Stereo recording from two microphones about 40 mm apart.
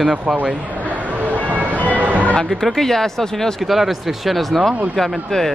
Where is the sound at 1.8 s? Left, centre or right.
Right.